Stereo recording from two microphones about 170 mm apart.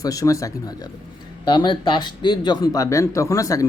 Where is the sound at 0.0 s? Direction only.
20° left (ahead or behind).